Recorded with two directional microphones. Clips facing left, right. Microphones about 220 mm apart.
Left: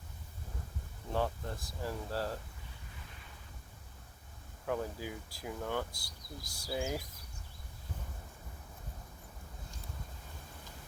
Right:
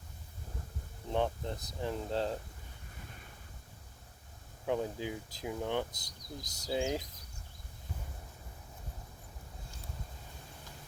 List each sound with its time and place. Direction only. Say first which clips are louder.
1.1 s speech: right 2 dB; 20° right (ahead or behind)
4.6 s speech: right 3 dB; 20° right (ahead or behind)